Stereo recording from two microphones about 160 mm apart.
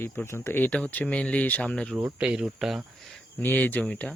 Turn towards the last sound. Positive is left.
turn(degrees=10)  # may be behind; listen again after turning